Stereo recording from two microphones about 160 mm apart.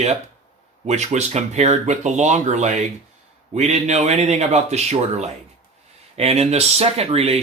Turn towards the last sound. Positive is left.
turn(degrees=-40)  # may be behind; listen again after turning